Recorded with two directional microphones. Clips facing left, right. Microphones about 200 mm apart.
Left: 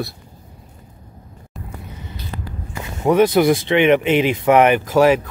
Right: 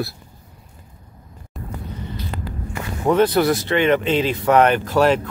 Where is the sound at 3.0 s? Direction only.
15° left (ahead or behind).